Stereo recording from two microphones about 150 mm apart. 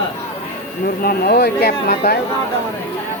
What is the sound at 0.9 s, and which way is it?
Speech, 90° left.